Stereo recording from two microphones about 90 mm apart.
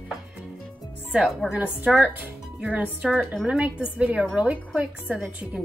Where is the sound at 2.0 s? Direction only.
15° right (ahead or behind).